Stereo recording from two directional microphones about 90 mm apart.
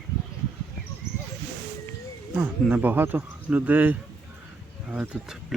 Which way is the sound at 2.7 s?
20° right (ahead or behind).